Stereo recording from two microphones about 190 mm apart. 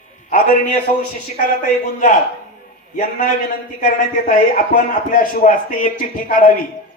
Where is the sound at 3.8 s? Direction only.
45° left (ahead or behind).